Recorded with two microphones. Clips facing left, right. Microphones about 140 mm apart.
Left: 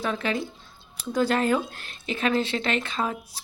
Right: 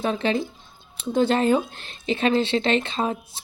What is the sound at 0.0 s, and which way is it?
Speech, 25° right (ahead or behind).